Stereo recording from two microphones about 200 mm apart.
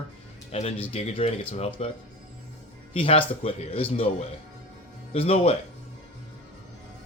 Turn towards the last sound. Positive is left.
turn(degrees=30)  # may be behind; listen again after turning